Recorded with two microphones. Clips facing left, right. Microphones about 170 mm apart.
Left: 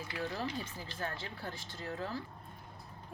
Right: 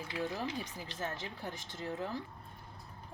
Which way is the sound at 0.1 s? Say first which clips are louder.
Right 1 dB; 15° right (ahead or behind).